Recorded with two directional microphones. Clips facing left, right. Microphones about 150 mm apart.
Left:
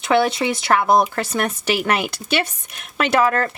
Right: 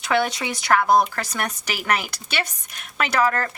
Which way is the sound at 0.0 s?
25° left (ahead or behind).